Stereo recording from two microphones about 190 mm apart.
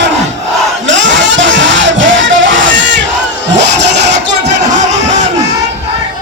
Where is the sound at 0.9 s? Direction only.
75° right (ahead or behind).